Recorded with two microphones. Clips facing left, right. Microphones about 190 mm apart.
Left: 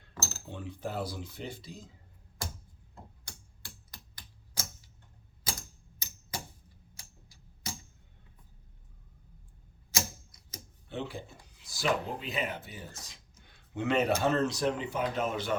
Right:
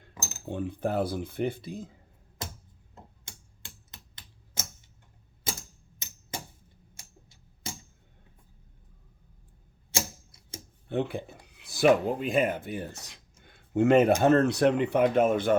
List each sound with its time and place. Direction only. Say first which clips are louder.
0.1 s cutlery: left 1 dB; 15° right (ahead or behind)
0.4 s speech: right 10 dB; 50° right (ahead or behind)
2.9 s typewriter: even; 20° right (ahead or behind)
5.5 s typewriter: right 3 dB; 25° right (ahead or behind)
6.9 s tick-tock: right 3 dB; 25° right (ahead or behind)
9.9 s typewriter: right 3 dB; 30° right (ahead or behind)
10.8 s speech: right 8 dB; 55° right (ahead or behind)
13.5 s a sound: right 9 dB; 50° right (ahead or behind)
14.2 s speech: right 7 dB; 55° right (ahead or behind)